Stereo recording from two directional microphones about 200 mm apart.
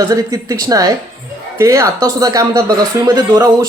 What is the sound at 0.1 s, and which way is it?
A man's voice, 15° right (ahead or behind).